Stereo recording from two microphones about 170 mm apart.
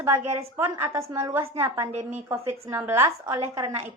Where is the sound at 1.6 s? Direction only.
15° right (ahead or behind).